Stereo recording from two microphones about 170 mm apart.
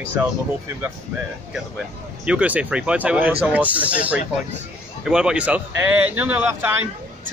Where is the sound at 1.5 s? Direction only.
5° right (ahead or behind).